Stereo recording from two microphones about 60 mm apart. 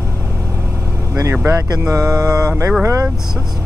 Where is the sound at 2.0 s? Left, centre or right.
Right.